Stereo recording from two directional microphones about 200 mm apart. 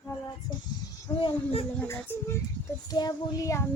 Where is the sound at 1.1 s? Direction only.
30° left (ahead or behind).